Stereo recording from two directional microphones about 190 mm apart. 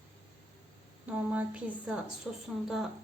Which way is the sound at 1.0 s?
10° right (ahead or behind).